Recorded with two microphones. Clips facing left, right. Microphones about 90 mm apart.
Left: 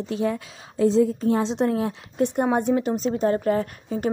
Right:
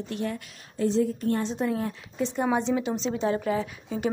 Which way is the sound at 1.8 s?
75° left (ahead or behind).